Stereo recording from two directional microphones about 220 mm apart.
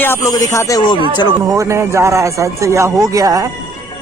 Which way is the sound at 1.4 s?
15° right (ahead or behind).